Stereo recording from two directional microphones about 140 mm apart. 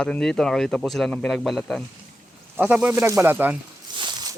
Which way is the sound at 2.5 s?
10° right (ahead or behind).